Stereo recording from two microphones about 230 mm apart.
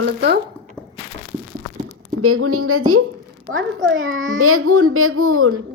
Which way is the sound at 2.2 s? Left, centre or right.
Right.